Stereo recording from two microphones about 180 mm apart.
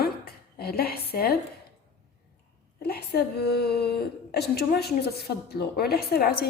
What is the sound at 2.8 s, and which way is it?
A woman's voice, 60° left (ahead or behind).